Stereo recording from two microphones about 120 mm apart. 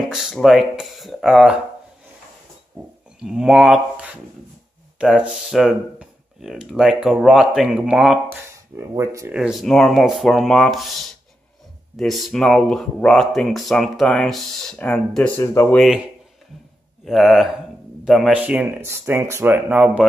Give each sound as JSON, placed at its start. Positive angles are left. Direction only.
{"t": 0.0, "sound": "speech", "side_deg": -5}
{"t": 3.2, "sound": "speech", "side_deg": -5}
{"t": 8.3, "sound": "speech", "side_deg": -25}
{"t": 9.3, "sound": "speech", "side_deg": -5}
{"t": 12.0, "sound": "speech", "side_deg": 0}
{"t": 15.3, "sound": "speech", "side_deg": 20}
{"t": 17.0, "sound": "speech", "side_deg": 0}
{"t": 18.8, "sound": "speech", "side_deg": -20}